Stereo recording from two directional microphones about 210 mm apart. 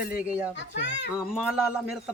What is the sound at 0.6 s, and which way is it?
Speech, 60° left (ahead or behind).